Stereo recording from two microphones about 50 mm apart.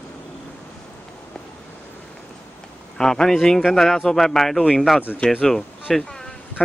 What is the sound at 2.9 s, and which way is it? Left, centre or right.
Speech, centre.